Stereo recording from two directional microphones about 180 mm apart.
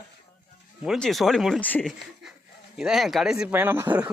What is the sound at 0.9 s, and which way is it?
A man's voice, centre (ahead or behind).